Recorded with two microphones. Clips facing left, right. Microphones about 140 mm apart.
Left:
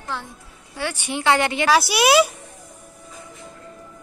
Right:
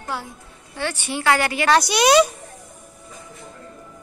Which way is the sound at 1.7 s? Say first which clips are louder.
Right 2 dB; 5° left (ahead or behind).